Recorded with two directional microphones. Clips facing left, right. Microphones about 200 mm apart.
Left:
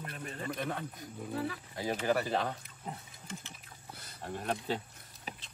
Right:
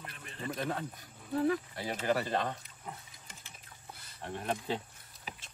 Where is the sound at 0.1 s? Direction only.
40° left (ahead or behind).